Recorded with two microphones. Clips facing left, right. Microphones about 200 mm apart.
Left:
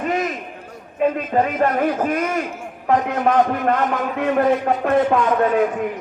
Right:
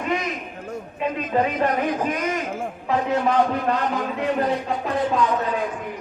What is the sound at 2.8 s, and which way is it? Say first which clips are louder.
Speech: left 4 dB; 50° left (ahead or behind).